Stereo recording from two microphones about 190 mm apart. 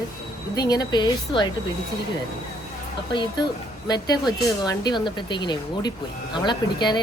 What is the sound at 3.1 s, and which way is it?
Speech, 25° left (ahead or behind).